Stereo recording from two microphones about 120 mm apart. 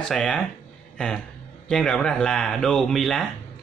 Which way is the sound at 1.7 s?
5° left (ahead or behind).